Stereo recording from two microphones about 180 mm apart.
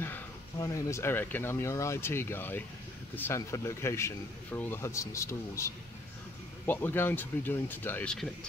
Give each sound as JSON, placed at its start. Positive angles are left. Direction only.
{"t": 0.0, "sound": "speech", "side_deg": 15}